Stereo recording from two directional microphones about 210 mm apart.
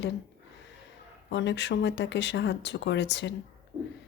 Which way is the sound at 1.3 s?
55° left (ahead or behind).